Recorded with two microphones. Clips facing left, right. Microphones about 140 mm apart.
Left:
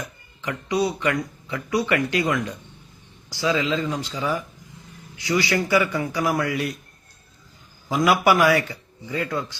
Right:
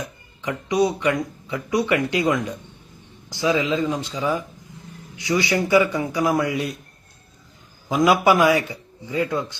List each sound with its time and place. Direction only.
0.4 s speech: 20° right (ahead or behind)
7.9 s speech: 20° right (ahead or behind)